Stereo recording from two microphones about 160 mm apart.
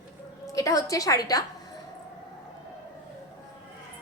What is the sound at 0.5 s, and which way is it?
Speech, 20° left (ahead or behind).